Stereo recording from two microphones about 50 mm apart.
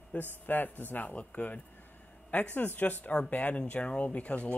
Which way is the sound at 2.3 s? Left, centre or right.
Left.